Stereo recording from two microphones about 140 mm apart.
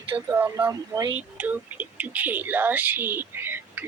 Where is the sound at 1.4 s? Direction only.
10° right (ahead or behind).